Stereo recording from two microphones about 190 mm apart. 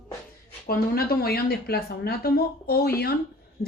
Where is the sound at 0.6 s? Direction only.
55° left (ahead or behind).